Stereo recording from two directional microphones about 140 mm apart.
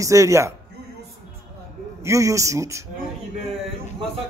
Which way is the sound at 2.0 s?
20° right (ahead or behind).